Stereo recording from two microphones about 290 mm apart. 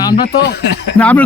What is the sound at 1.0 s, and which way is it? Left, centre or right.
Speech, centre.